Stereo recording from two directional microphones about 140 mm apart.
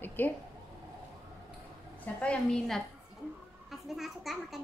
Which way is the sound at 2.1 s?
5° left (ahead or behind).